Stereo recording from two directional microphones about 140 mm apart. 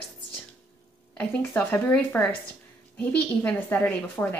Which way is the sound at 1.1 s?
10° left (ahead or behind).